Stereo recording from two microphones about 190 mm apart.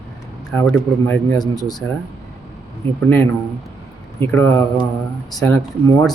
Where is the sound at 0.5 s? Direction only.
5° left (ahead or behind).